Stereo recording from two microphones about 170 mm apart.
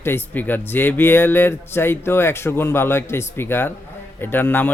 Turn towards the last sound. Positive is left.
turn(degrees=10)  # may be behind; listen again after turning